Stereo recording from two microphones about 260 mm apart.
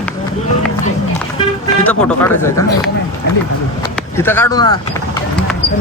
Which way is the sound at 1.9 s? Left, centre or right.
Centre.